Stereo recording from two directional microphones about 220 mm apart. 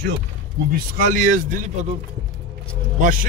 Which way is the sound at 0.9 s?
35° right (ahead or behind).